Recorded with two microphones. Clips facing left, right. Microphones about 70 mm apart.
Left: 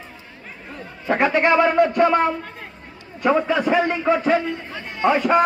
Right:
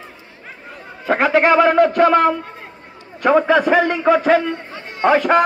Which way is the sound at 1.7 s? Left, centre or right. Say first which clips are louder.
Right 3 dB; right.